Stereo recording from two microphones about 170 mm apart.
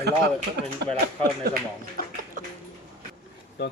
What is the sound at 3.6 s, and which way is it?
Speech, 75° left (ahead or behind).